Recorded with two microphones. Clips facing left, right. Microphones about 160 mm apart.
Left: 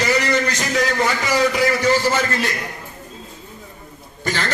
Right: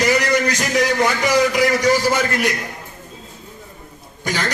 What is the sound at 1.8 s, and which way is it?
Speech, 15° right (ahead or behind).